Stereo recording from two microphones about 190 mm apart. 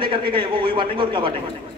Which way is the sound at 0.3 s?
25° right (ahead or behind).